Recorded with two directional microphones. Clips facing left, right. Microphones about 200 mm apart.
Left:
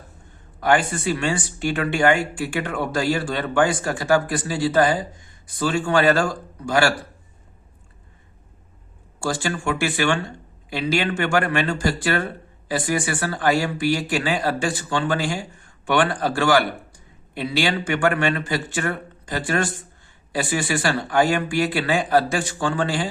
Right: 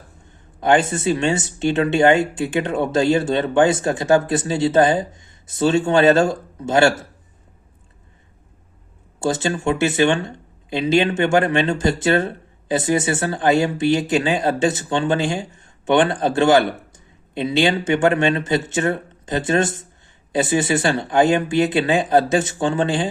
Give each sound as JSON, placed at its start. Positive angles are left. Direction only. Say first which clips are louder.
{"t": 0.6, "sound": "speech", "louder": "right 3 dB", "side_deg": -20}
{"t": 9.2, "sound": "speech", "louder": "right 4 dB", "side_deg": -20}